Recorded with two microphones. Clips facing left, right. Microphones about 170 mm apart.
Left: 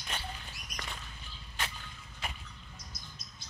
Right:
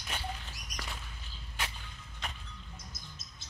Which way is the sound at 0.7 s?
40° right (ahead or behind).